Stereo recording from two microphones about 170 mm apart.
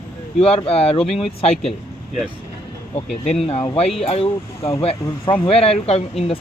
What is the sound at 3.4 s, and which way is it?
Speech, 40° left (ahead or behind).